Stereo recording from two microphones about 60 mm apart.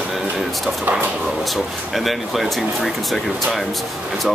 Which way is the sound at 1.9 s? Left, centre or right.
Centre.